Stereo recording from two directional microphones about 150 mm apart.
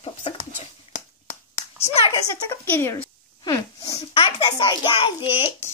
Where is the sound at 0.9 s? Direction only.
45° left (ahead or behind).